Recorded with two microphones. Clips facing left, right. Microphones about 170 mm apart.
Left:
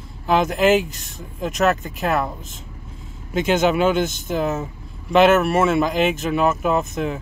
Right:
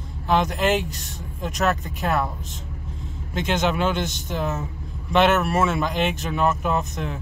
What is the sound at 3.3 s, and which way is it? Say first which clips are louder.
Speech: left 5 dB; 5° left (ahead or behind).